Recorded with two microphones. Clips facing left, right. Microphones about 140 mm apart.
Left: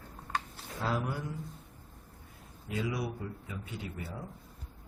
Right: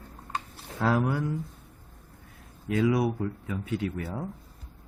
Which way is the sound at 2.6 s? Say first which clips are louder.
Right 10 dB; 90° right.